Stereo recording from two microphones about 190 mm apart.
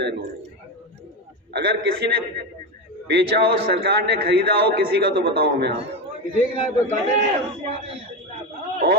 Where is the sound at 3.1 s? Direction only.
60° right (ahead or behind).